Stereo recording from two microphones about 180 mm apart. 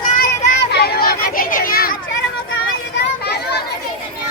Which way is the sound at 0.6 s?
65° left (ahead or behind).